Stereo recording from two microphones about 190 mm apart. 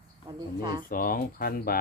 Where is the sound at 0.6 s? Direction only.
20° right (ahead or behind).